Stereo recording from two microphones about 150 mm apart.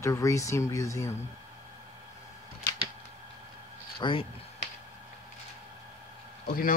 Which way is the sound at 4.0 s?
35° left (ahead or behind).